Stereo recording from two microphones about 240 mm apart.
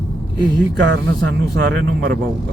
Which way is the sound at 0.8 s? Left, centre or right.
Right.